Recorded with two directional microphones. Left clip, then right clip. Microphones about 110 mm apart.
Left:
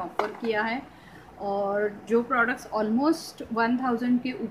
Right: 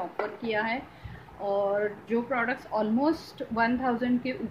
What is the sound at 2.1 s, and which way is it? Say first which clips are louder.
A woman's voice: left 6 dB; 40° left (ahead or behind).